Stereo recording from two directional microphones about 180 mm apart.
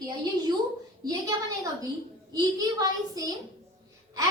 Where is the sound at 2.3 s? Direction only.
20° right (ahead or behind).